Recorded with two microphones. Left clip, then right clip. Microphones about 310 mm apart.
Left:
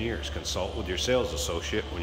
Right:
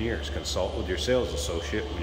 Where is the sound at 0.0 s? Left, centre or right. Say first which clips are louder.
Right 1 dB; centre.